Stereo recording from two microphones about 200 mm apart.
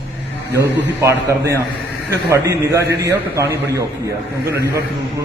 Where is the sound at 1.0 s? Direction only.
15° right (ahead or behind).